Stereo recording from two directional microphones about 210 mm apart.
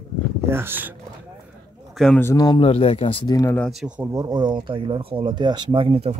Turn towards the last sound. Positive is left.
turn(degrees=-25)  # may be behind; listen again after turning